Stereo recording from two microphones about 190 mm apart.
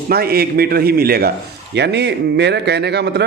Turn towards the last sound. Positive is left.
turn(degrees=-60)  # may be behind; listen again after turning